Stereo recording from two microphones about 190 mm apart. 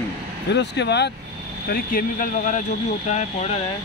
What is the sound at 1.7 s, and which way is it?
Speech, 50° left (ahead or behind).